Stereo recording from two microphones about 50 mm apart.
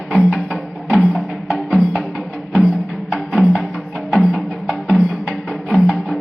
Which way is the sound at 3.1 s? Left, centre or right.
Centre.